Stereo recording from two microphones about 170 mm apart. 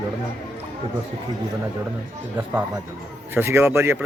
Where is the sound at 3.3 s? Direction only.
15° right (ahead or behind).